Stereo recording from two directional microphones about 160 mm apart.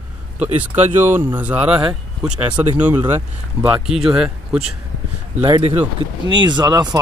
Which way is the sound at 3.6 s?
5° right (ahead or behind).